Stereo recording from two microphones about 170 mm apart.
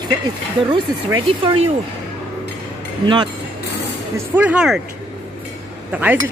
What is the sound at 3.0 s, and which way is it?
Speech, 25° right (ahead or behind).